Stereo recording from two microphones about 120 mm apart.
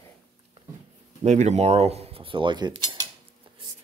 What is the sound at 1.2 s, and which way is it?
Cutlery, 75° right (ahead or behind).